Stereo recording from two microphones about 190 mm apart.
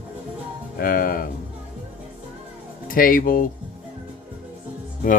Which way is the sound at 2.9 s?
45° left (ahead or behind).